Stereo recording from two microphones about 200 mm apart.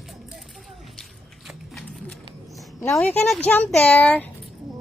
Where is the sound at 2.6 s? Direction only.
Centre (ahead or behind).